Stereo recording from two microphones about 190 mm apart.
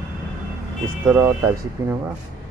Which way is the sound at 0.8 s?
10° right (ahead or behind).